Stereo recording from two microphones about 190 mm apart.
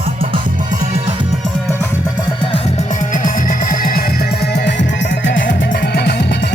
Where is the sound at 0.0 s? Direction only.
30° right (ahead or behind).